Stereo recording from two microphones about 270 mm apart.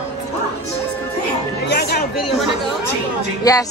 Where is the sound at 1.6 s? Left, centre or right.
Left.